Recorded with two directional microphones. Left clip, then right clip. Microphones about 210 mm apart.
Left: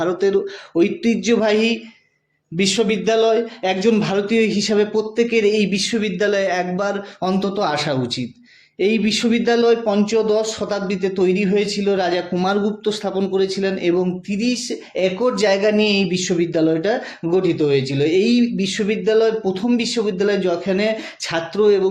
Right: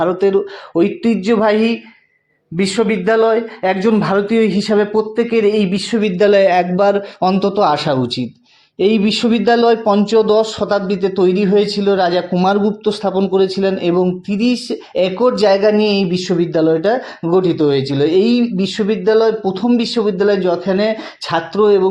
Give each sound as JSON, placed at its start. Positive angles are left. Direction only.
{"t": 0.0, "sound": "speech", "side_deg": -15}
{"t": 6.1, "sound": "a man's voice", "side_deg": -35}